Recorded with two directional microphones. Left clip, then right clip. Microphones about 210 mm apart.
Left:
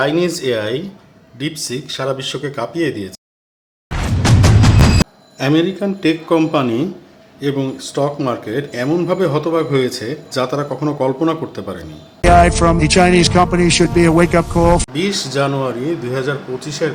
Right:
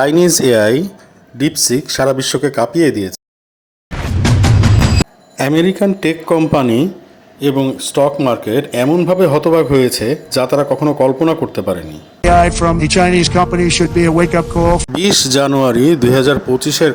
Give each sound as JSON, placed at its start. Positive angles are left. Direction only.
{"t": 0.0, "sound": "a man's voice", "side_deg": -35}
{"t": 5.4, "sound": "a man's voice", "side_deg": -35}
{"t": 12.2, "sound": "a man's voice", "side_deg": 0}
{"t": 14.9, "sound": "speech", "side_deg": -45}